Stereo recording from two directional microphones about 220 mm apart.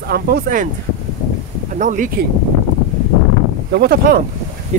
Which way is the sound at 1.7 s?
35° right (ahead or behind).